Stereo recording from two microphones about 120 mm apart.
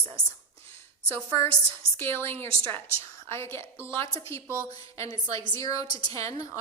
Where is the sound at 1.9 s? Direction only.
20° left (ahead or behind).